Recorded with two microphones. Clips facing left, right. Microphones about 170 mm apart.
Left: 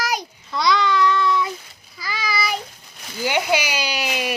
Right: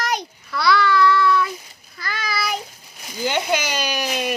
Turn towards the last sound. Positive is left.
turn(degrees=10)  # may be behind; listen again after turning